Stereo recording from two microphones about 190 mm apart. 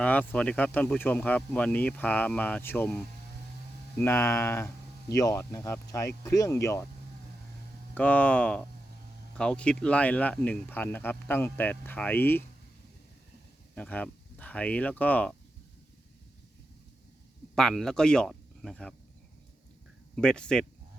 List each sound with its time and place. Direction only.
0.0 s speech: 5° left (ahead or behind)
7.9 s speech: 5° left (ahead or behind)
13.7 s speech: 5° left (ahead or behind)
17.5 s speech: centre (ahead or behind)
20.1 s speech: 5° left (ahead or behind)